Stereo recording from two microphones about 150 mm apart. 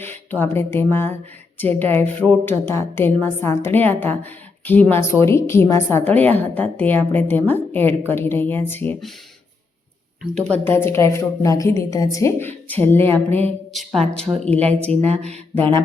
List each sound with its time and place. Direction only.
0.0 s a woman's voice: 15° left (ahead or behind)
10.5 s a woman's voice: 15° left (ahead or behind)
14.4 s a woman's voice: 10° left (ahead or behind)
14.8 s speech: 45° right (ahead or behind)